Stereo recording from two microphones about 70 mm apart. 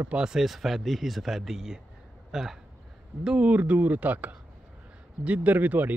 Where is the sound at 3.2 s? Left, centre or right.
Centre.